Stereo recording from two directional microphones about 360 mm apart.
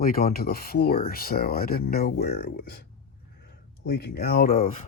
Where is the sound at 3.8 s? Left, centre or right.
Left.